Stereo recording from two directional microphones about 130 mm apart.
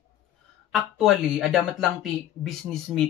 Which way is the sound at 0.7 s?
5° right (ahead or behind).